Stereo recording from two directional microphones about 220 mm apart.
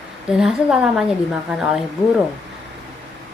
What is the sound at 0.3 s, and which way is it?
A woman's voice, centre (ahead or behind).